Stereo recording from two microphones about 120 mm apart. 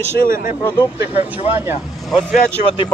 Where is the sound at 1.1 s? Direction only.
55° left (ahead or behind).